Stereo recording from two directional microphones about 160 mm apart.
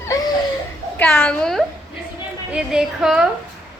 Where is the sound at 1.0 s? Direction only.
10° left (ahead or behind).